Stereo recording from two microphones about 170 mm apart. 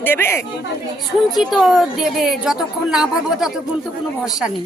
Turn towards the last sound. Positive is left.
turn(degrees=0)  # may be behind; listen again after turning